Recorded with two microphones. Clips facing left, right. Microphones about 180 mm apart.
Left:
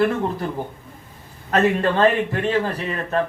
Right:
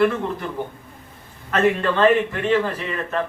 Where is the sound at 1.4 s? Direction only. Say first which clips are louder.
Left 1 dB; 40° left (ahead or behind).